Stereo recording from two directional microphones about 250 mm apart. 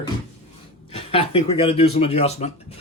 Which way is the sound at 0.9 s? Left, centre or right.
Left.